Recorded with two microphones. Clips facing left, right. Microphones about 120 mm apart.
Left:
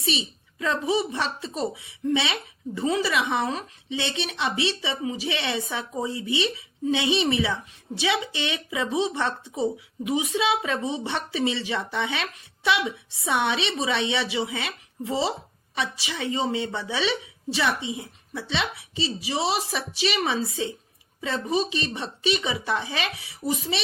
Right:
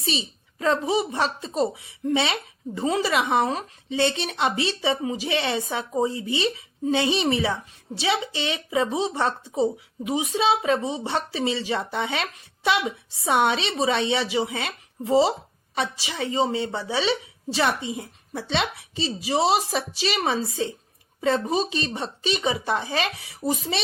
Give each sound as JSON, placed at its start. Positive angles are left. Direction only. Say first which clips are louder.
{"t": 0.0, "sound": "speech", "louder": "even", "side_deg": -35}